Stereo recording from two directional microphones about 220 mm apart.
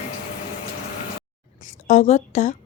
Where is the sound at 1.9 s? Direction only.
35° left (ahead or behind).